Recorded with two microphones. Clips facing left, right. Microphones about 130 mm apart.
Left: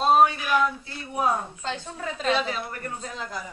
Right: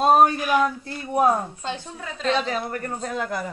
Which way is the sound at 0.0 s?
45° right (ahead or behind).